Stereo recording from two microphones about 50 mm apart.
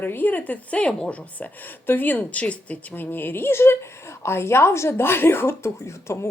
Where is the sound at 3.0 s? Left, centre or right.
Left.